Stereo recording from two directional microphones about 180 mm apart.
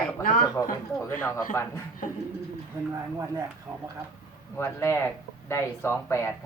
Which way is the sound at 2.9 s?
15° right (ahead or behind).